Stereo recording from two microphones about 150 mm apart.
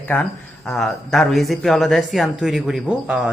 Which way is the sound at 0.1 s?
10° left (ahead or behind).